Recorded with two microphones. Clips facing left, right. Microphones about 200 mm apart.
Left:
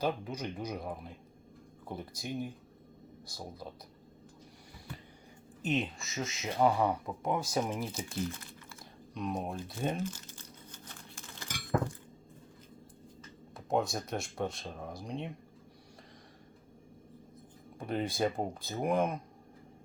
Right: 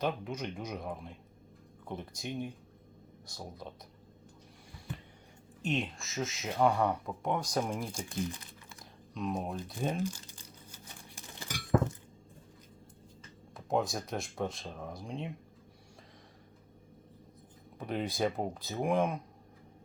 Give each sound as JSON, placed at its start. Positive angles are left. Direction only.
{"t": 0.0, "sound": "speech", "side_deg": 0}
{"t": 5.6, "sound": "speech", "side_deg": 0}
{"t": 9.1, "sound": "speech", "side_deg": 0}
{"t": 10.0, "sound": "crumpling", "side_deg": -10}
{"t": 11.5, "sound": "a sound", "side_deg": -25}
{"t": 13.7, "sound": "speech", "side_deg": 0}
{"t": 17.7, "sound": "speech", "side_deg": 0}